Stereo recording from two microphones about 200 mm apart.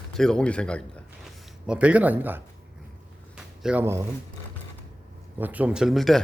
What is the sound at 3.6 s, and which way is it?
Speech, 10° right (ahead or behind).